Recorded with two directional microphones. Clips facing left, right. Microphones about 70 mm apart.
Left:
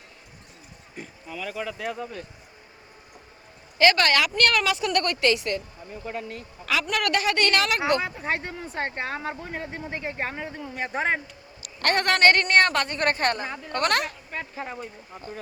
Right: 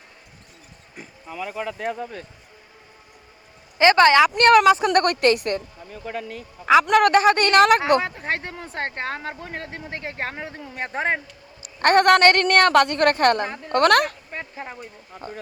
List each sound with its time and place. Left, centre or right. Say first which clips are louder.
1.3 s a woman's voice: right 3 dB; right
1.8 s speech: right 3 dB; right
3.8 s a woman's voice: right 6 dB; right
4.9 s speech: right 5 dB; right
6.9 s a woman's voice: right 9 dB; right